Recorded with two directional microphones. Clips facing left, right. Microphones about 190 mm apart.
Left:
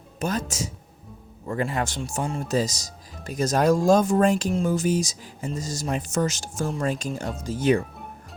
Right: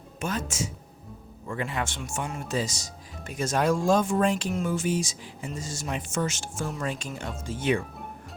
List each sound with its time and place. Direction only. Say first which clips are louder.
0.2 s speech: left 3 dB; 40° left (ahead or behind)